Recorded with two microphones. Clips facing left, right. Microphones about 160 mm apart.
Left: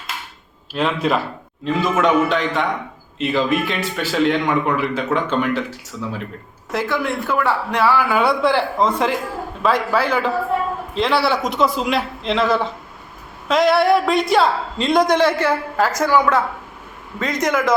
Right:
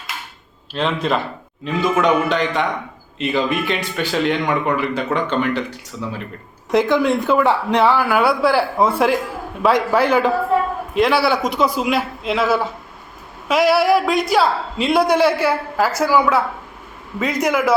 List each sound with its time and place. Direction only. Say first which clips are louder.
0.7 s a man's voice: left 1 dB; 5° left (ahead or behind)
6.7 s speech: right 6 dB; 20° right (ahead or behind)
8.1 s a man's voice: right 1 dB; 5° right (ahead or behind)
10.9 s a man's voice: right 2 dB; 5° right (ahead or behind)